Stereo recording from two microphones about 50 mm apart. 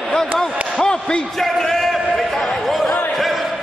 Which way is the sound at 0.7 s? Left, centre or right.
Centre.